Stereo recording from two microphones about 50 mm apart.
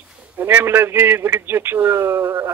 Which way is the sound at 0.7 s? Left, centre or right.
Right.